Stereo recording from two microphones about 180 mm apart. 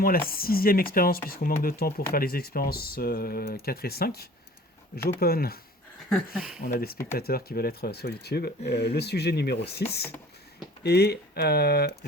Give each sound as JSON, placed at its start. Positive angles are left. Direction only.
{"t": 0.0, "sound": "speech", "side_deg": 55}
{"t": 6.1, "sound": "a sound", "side_deg": 0}
{"t": 6.6, "sound": "speech", "side_deg": 50}
{"t": 10.8, "sound": "speech", "side_deg": 65}